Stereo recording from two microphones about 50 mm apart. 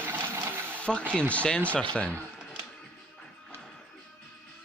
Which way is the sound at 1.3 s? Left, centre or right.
Left.